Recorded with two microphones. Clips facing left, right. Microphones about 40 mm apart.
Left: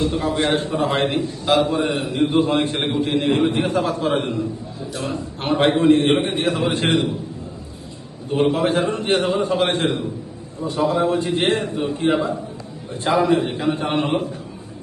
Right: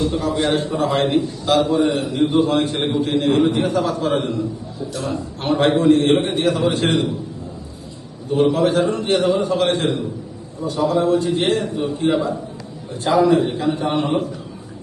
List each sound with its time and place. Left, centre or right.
0.0 s a man's voice: left
8.4 s a man's voice: left